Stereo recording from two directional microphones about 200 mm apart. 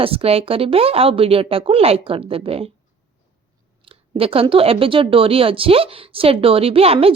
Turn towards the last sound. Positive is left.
turn(degrees=-30)  # may be behind; listen again after turning